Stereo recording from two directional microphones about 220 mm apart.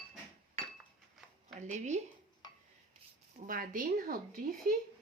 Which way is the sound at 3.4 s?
40° right (ahead or behind).